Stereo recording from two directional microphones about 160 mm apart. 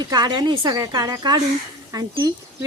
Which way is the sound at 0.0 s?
25° right (ahead or behind).